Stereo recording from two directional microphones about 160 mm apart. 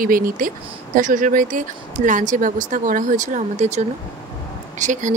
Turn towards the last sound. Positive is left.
turn(degrees=-50)  # may be behind; listen again after turning